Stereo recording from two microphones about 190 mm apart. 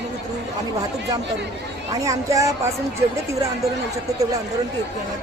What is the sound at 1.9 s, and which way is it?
Speech, 15° right (ahead or behind).